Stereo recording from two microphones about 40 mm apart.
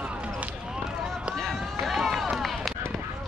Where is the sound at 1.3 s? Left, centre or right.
Centre.